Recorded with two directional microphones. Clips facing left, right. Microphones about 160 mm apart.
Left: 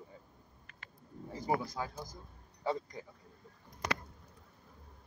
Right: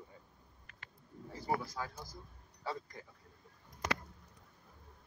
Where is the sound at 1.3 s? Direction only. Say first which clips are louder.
Left 3 dB; 15° left (ahead or behind).